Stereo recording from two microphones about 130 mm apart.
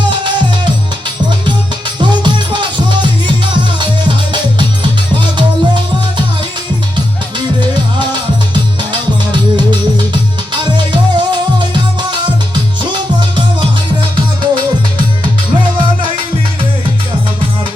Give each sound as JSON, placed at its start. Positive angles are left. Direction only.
{"t": 2.0, "sound": "music", "side_deg": -35}
{"t": 8.8, "sound": "music", "side_deg": -35}